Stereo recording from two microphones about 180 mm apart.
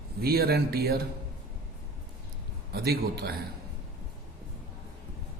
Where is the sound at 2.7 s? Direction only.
60° right (ahead or behind).